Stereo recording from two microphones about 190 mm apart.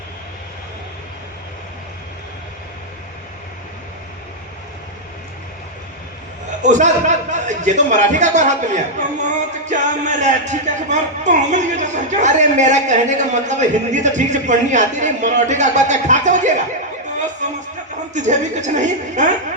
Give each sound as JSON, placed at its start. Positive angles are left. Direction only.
{"t": 6.6, "sound": "a man's voice", "side_deg": -40}
{"t": 18.1, "sound": "a man's voice", "side_deg": -40}